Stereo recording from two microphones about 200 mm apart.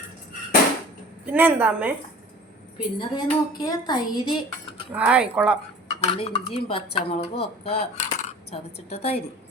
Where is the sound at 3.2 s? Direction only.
20° left (ahead or behind).